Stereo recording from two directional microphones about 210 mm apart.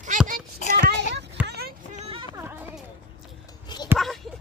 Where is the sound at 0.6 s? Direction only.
35° left (ahead or behind).